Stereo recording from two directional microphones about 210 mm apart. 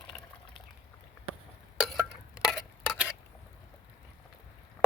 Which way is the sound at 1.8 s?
Centre (ahead or behind).